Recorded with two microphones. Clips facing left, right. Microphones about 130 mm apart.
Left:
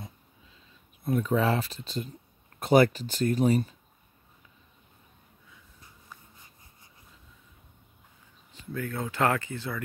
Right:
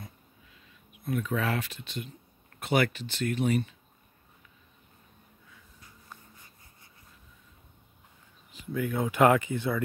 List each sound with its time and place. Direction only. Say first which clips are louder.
1.0 s speech: left 5 dB; 35° left (ahead or behind)
8.7 s speech: right 4 dB; 15° right (ahead or behind)